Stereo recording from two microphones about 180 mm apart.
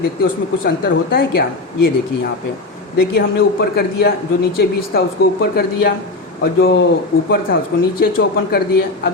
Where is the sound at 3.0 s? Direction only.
60° left (ahead or behind).